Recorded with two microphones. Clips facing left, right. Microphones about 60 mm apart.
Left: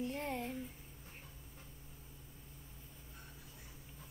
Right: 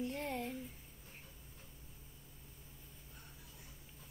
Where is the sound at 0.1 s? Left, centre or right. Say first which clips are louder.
Even; centre.